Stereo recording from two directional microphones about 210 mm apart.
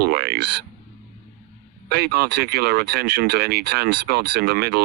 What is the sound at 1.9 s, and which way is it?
Speech, 50° right (ahead or behind).